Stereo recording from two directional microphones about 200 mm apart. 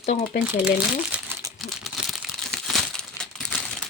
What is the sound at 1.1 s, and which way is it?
Crumpling, 15° right (ahead or behind).